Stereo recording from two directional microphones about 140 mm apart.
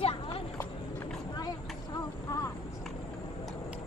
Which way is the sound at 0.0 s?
40° left (ahead or behind).